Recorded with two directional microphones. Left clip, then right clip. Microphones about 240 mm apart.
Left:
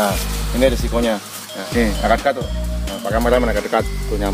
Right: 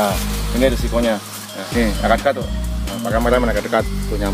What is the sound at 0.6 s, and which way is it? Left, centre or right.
Speech, centre.